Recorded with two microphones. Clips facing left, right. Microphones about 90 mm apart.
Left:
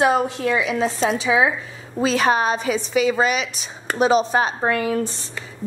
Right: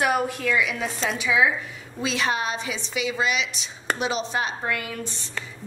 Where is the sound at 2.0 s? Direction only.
45° left (ahead or behind).